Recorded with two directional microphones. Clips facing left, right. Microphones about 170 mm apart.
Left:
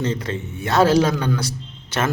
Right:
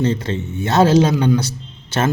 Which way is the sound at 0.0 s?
30° right (ahead or behind).